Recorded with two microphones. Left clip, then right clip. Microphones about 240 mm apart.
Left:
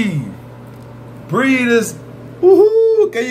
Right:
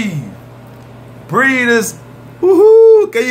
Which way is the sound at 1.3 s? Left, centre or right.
Right.